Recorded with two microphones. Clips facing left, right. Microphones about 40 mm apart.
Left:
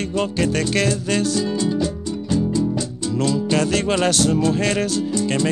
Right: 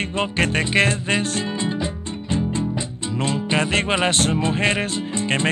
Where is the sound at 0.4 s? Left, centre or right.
Right.